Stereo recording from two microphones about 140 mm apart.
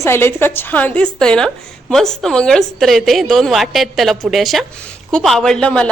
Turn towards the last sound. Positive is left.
turn(degrees=5)  # may be behind; listen again after turning